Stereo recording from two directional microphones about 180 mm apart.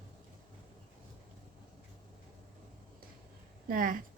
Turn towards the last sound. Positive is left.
turn(degrees=-50)  # may be behind; listen again after turning